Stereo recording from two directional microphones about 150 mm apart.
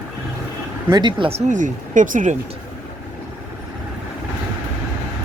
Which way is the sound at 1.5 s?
60° right (ahead or behind).